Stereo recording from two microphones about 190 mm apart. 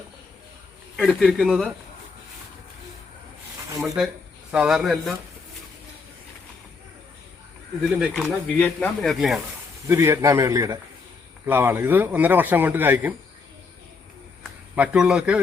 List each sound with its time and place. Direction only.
0.9 s speech: centre (ahead or behind)
3.8 s speech: centre (ahead or behind)
7.9 s speech: centre (ahead or behind)
8.5 s speech: 10° left (ahead or behind)
9.9 s a man's voice: 15° right (ahead or behind)
14.8 s speech: 5° right (ahead or behind)